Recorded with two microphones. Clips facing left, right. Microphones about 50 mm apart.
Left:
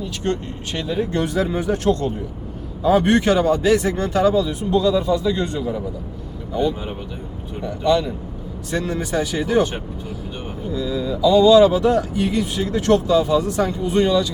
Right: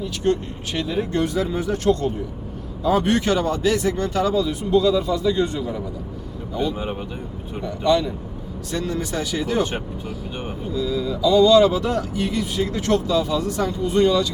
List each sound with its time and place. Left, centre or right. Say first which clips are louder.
0.8 s speech: even; centre
2.9 s speech: left 3 dB; centre
7.6 s speech: left 1 dB; centre
10.8 s speech: left 1 dB; centre